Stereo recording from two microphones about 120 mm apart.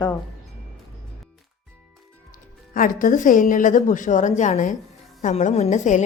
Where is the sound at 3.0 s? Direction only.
90° left.